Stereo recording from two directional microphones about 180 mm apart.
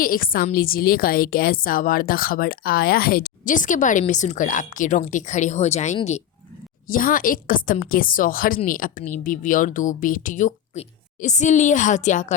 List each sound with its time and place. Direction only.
0.0 s a woman's voice: 55° left (ahead or behind)
6.8 s a woman's voice: 50° left (ahead or behind)